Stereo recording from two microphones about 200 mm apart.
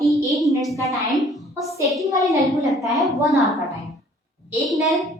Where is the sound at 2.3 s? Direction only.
15° right (ahead or behind).